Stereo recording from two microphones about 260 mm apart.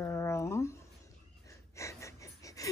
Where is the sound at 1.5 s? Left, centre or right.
Centre.